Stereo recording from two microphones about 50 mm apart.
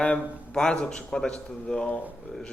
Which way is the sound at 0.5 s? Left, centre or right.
Centre.